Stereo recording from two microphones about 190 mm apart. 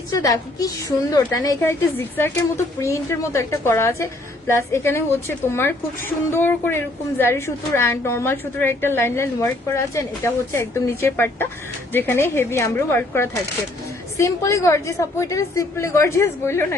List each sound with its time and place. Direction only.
0.1 s a woman's voice: 20° left (ahead or behind)